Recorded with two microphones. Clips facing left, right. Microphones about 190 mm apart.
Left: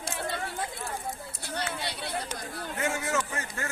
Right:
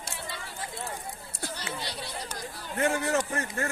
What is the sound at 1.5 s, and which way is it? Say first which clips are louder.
Chatter: left 6 dB; 60° left (ahead or behind).